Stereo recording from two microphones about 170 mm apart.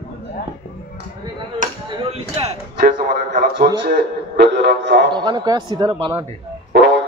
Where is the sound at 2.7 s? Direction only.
60° right (ahead or behind).